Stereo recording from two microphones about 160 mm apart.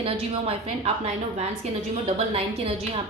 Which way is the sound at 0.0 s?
35° right (ahead or behind).